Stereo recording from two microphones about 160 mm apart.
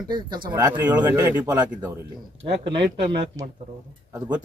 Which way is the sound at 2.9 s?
90° right.